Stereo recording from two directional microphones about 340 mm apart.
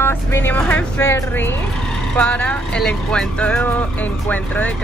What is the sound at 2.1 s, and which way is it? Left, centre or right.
Speech, centre.